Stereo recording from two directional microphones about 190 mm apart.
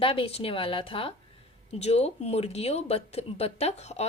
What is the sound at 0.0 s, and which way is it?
A woman's voice, 30° left (ahead or behind).